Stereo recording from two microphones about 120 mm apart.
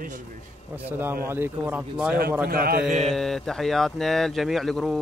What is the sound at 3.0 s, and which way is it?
Speech, centre (ahead or behind).